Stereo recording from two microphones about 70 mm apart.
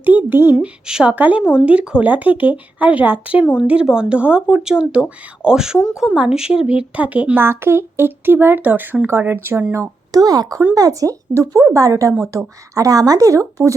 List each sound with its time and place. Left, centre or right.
0.0 s speech: right
0.6 s speech: centre
1.1 s speech: right
7.4 s speech: right
10.1 s speech: right